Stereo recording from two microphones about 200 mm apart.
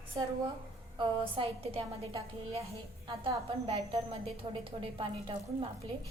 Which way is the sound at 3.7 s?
30° right (ahead or behind).